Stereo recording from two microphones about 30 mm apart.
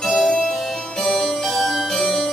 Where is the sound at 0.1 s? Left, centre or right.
Centre.